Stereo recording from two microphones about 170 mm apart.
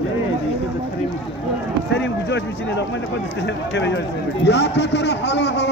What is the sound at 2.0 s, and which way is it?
A man's voice, 90° left.